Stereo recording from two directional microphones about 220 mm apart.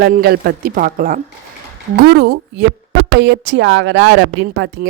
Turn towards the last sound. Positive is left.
turn(degrees=-55)  # may be behind; listen again after turning